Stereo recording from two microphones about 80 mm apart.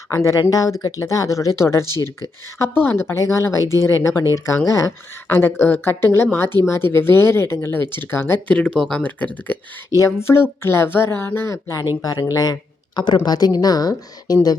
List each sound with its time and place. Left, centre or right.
0.1 s speech: left
5.3 s speech: left
8.4 s speech: centre
8.8 s speech: centre
9.0 s speech: left
9.9 s a woman's voice: left